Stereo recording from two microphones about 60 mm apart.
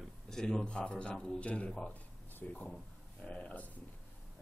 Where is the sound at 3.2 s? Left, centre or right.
Centre.